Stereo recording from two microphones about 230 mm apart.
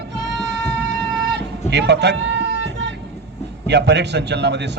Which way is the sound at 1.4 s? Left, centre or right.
Right.